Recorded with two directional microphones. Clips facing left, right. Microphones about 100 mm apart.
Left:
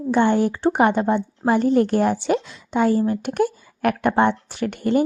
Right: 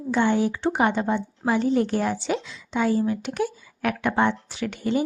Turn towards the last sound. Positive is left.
turn(degrees=55)  # may be behind; listen again after turning